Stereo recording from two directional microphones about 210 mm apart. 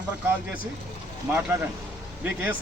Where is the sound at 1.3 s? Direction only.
5° right (ahead or behind).